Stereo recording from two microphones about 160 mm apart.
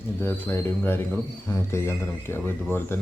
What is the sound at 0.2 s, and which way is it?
Speech, 15° left (ahead or behind).